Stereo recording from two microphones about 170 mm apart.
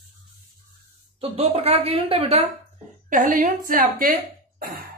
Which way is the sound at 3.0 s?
50° right (ahead or behind).